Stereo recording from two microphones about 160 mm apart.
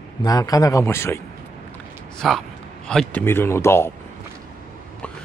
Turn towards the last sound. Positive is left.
turn(degrees=15)  # may be behind; listen again after turning